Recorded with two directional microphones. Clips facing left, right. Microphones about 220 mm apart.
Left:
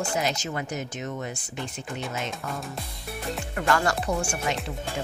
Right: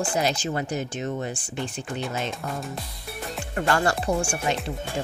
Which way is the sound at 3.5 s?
30° right (ahead or behind).